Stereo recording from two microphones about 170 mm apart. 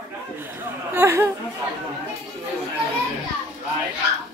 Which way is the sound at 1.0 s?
15° right (ahead or behind).